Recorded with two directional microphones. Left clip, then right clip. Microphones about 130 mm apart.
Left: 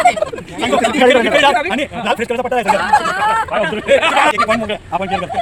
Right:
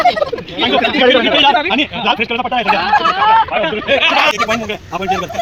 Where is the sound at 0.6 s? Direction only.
35° left (ahead or behind).